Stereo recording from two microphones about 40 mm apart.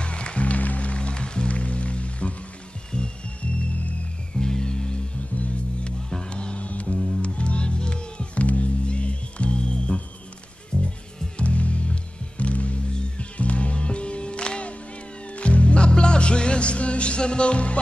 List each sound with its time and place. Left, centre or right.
0.0 s music: left
4.4 s music: centre
6.0 s music: centre
6.9 s music: centre
7.2 s music: left
11.3 s music: left